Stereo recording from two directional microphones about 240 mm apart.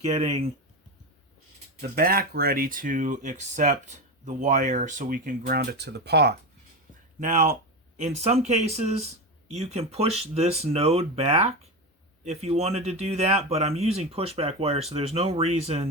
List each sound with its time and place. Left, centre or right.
0.0 s speech: right
1.8 s speech: right
7.2 s speech: right